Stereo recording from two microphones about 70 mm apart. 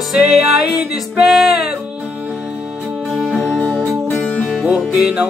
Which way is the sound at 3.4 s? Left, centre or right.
Centre.